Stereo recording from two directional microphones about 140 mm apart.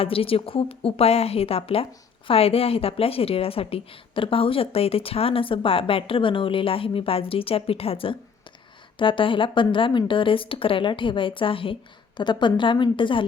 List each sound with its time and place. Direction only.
0.0 s a woman's voice: 40° left (ahead or behind)